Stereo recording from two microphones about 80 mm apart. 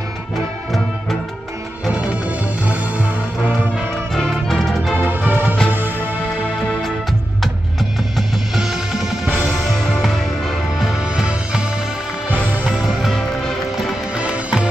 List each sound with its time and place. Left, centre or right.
1.9 s music: centre
4.1 s music: centre
4.9 s music: right
9.5 s music: centre
12.6 s music: centre
14.1 s music: centre